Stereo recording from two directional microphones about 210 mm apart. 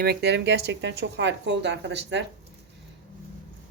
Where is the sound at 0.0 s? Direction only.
50° right (ahead or behind).